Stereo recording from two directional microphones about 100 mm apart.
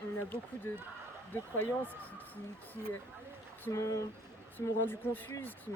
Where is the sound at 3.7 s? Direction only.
30° left (ahead or behind).